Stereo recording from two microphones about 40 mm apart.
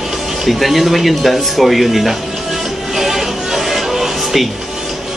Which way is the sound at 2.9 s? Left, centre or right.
Centre.